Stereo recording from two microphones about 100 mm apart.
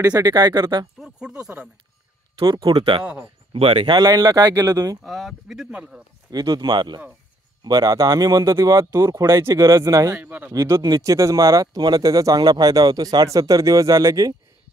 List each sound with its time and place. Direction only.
0.0 s speech: 35° right (ahead or behind)
0.9 s speech: 10° right (ahead or behind)
2.3 s speech: 50° right (ahead or behind)
3.0 s speech: 10° right (ahead or behind)
3.5 s speech: 80° right
3.8 s speech: 45° right (ahead or behind)
5.0 s speech: 5° right (ahead or behind)
6.3 s speech: 40° right (ahead or behind)
10.1 s speech: 20° right (ahead or behind)
10.5 s speech: 35° right (ahead or behind)